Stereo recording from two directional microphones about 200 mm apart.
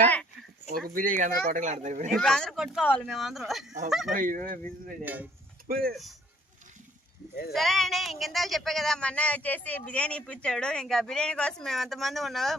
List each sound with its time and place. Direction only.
0.0 s a sound: 5° left (ahead or behind)
0.9 s speech: 45° right (ahead or behind)
2.1 s speech: centre (ahead or behind)
4.1 s speech: 40° right (ahead or behind)
5.0 s speech: 10° right (ahead or behind)
5.6 s speech: 50° right (ahead or behind)
7.5 s speech: centre (ahead or behind)